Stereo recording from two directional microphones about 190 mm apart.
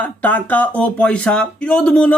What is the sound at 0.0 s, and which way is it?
Speech, 10° left (ahead or behind).